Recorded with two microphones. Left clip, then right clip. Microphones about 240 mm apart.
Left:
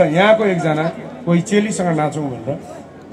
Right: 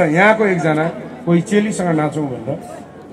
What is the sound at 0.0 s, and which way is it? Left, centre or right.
A man's voice, left.